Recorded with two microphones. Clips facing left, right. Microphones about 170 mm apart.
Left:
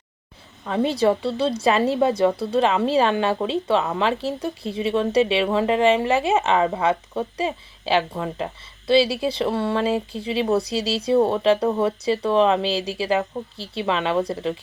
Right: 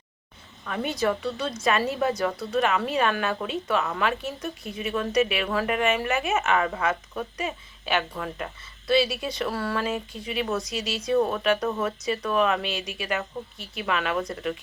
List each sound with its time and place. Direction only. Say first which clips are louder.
0.6 s a woman's voice: left 7 dB; 30° left (ahead or behind)